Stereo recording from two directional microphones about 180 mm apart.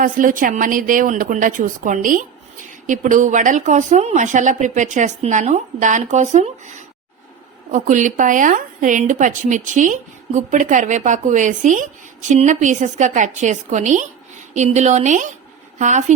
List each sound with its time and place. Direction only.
0.0 s a woman's voice: 45° right (ahead or behind)